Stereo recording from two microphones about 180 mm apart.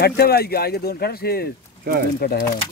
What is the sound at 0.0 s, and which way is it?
Speech, 60° left (ahead or behind).